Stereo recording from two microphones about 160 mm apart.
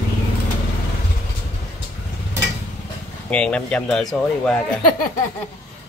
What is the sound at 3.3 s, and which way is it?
Speech, 5° left (ahead or behind).